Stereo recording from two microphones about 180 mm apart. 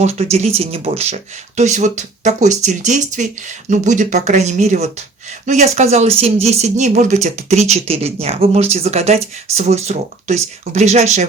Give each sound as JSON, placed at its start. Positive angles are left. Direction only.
{"t": 0.0, "sound": "speech", "side_deg": -35}